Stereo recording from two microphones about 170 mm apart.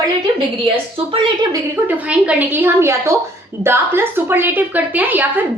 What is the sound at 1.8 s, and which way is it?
A woman's voice, 10° right (ahead or behind).